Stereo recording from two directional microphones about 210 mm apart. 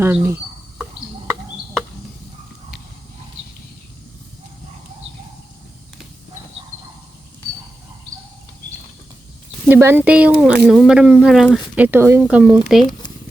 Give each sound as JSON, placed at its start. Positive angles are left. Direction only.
{"t": 0.0, "sound": "speech", "side_deg": -10}
{"t": 9.6, "sound": "speech", "side_deg": -10}
{"t": 12.8, "sound": "speech", "side_deg": 20}